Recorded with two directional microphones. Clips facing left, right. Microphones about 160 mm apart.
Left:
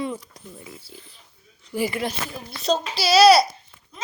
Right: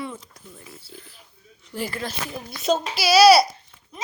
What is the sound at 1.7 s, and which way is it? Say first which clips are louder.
Speech: left 5 dB; 10° left (ahead or behind).